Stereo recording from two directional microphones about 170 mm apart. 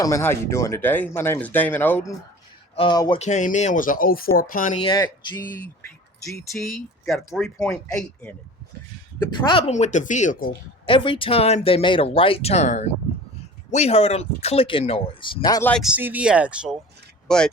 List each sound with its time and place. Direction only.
0.0 s speech: 15° left (ahead or behind)
2.7 s speech: 25° left (ahead or behind)
3.2 s speech: 45° left (ahead or behind)
4.8 s speech: 25° left (ahead or behind)
6.5 s speech: centre (ahead or behind)
9.5 s speech: 35° left (ahead or behind)
10.8 s speech: 30° left (ahead or behind)
15.8 s speech: 10° right (ahead or behind)
17.2 s speech: 5° left (ahead or behind)